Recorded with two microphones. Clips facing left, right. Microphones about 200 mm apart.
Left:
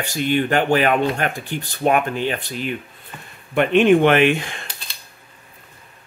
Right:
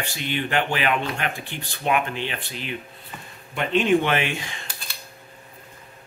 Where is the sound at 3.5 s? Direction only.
60° left (ahead or behind).